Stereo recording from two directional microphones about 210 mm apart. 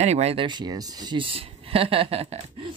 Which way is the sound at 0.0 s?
30° right (ahead or behind).